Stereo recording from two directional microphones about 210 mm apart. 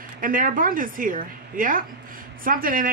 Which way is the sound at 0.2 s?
40° right (ahead or behind).